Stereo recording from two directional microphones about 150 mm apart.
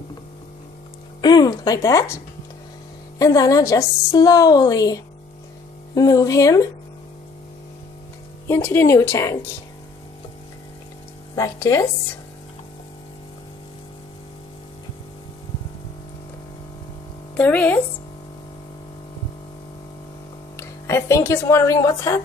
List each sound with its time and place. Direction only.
1.2 s a woman's voice: 30° left (ahead or behind)
8.5 s speech: 15° left (ahead or behind)
11.3 s a woman's voice: 20° left (ahead or behind)
17.4 s speech: 10° left (ahead or behind)
20.5 s speech: 20° left (ahead or behind)